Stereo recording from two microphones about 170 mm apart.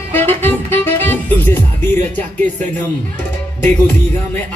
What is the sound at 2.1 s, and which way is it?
Speech, 45° right (ahead or behind).